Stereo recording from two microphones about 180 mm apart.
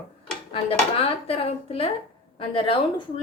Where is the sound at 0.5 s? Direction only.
30° left (ahead or behind).